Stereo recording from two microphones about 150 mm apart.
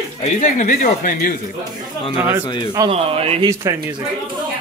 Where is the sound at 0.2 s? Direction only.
55° left (ahead or behind).